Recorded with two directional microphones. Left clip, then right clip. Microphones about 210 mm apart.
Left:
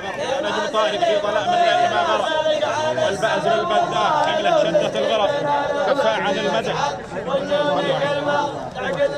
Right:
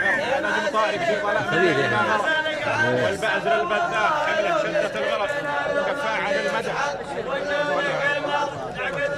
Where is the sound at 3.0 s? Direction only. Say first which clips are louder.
Left 3 dB; 20° left (ahead or behind).